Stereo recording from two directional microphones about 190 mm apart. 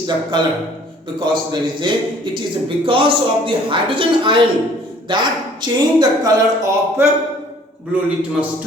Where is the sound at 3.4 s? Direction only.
25° right (ahead or behind); by 7.1 s 10° right (ahead or behind).